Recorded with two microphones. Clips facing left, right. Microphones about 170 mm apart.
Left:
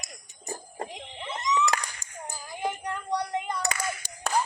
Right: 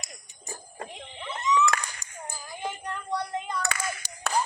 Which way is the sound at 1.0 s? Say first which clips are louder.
Even; 20° left (ahead or behind).